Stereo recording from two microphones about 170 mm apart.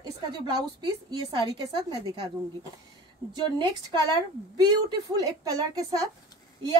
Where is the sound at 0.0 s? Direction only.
25° right (ahead or behind).